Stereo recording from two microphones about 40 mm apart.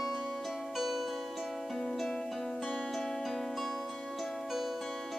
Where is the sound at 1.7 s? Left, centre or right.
Centre.